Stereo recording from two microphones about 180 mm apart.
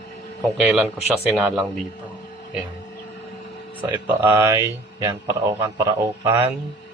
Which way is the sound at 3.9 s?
15° right (ahead or behind).